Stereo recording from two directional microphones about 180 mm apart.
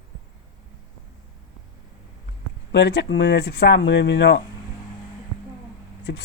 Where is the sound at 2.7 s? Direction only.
70° left (ahead or behind).